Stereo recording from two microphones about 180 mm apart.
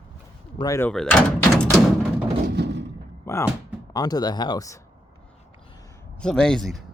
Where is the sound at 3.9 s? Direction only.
20° left (ahead or behind).